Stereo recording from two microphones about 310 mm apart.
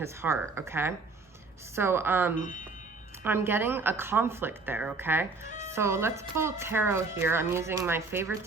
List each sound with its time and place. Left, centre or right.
0.0 s speech: centre
5.5 s music: left
5.7 s speech: centre